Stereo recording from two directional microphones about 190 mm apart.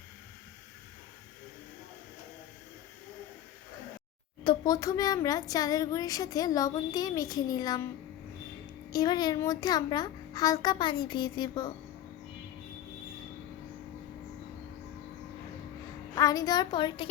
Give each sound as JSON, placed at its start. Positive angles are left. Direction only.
{"t": 4.4, "sound": "speech", "side_deg": 20}
{"t": 8.9, "sound": "speech", "side_deg": 20}
{"t": 16.1, "sound": "speech", "side_deg": 20}